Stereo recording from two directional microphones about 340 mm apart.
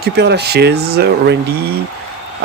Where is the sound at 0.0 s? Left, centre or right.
Right.